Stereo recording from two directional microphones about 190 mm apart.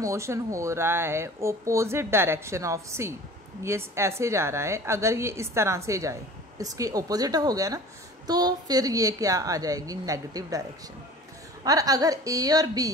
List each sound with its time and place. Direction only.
0.0 s a woman's voice: 15° right (ahead or behind)
11.6 s a woman's voice: 20° right (ahead or behind)